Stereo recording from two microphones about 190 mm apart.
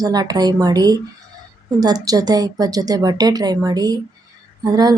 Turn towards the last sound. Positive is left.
turn(degrees=-20)  # may be behind; listen again after turning